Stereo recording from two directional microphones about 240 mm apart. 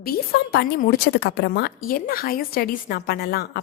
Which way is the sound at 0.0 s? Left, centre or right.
Left.